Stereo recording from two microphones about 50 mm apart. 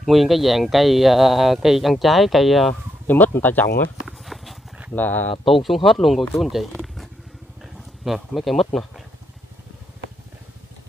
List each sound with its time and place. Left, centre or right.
0.0 s speech: centre
3.1 s speech: left
4.2 s horse: centre
4.9 s speech: left
5.5 s speech: centre
7.6 s a sound: centre
8.4 s speech: centre